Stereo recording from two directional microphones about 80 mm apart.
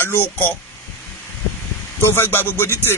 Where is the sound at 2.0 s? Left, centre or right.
Left.